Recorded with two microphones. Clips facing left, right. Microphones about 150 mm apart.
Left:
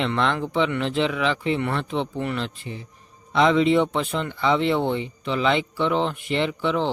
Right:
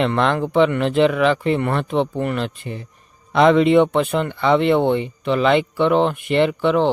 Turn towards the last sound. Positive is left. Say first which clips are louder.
# right 7 dB
turn(degrees=-60)  # may be behind; listen again after turning